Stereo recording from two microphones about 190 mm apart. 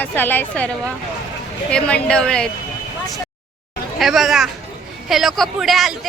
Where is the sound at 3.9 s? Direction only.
Centre (ahead or behind).